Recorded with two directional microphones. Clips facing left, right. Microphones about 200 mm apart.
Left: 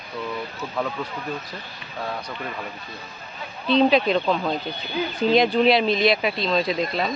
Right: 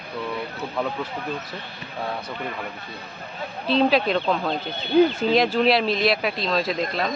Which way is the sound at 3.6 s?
Centre (ahead or behind).